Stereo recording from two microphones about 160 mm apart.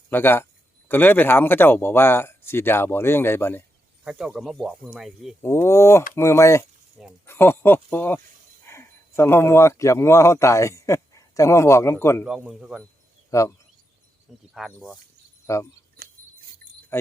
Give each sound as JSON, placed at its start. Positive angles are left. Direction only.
{"t": 0.1, "sound": "speech", "side_deg": 15}
{"t": 4.0, "sound": "speech", "side_deg": -5}
{"t": 5.4, "sound": "speech", "side_deg": 15}
{"t": 12.2, "sound": "speech", "side_deg": -5}
{"t": 13.3, "sound": "speech", "side_deg": 20}
{"t": 14.5, "sound": "speech", "side_deg": 0}
{"t": 15.4, "sound": "speech", "side_deg": 20}
{"t": 16.9, "sound": "wind chime", "side_deg": 15}